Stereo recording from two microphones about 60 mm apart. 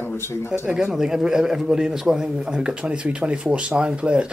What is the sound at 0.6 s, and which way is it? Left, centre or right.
A man's voice, centre.